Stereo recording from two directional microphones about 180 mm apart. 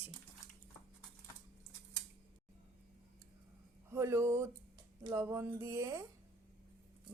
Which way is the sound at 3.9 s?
15° right (ahead or behind).